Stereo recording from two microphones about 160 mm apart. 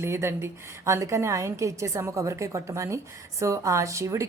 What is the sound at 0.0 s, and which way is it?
A woman's voice, 15° right (ahead or behind).